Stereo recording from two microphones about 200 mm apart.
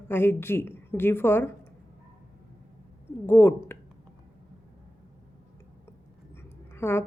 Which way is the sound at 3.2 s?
10° left (ahead or behind).